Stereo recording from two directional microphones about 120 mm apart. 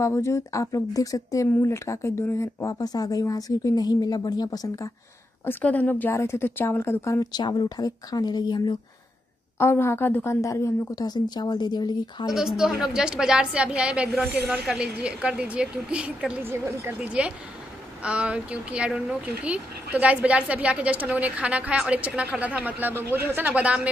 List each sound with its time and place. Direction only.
0.0 s speech: 25° left (ahead or behind)
5.4 s speech: 15° left (ahead or behind); by 8.7 s 35° left (ahead or behind)
9.6 s speech: 20° left (ahead or behind); by 12.3 s 40° left (ahead or behind)
12.3 s a woman's voice: 5° right (ahead or behind)
16.4 s speech: 20° right (ahead or behind)
17.0 s speech: 10° right (ahead or behind)